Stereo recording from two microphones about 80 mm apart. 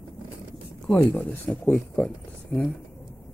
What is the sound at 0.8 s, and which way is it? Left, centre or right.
Speech, centre.